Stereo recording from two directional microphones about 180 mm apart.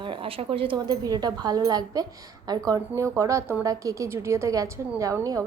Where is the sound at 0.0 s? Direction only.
30° right (ahead or behind).